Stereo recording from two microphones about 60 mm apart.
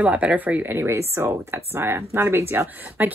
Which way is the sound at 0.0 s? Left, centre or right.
Right.